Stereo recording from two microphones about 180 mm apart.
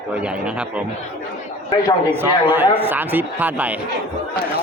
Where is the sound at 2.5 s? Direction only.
10° right (ahead or behind).